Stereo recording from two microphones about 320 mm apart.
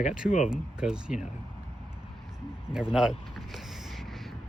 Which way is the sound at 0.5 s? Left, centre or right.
Centre.